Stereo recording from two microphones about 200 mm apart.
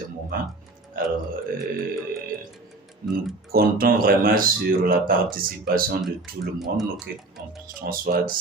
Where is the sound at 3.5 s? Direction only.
50° right (ahead or behind).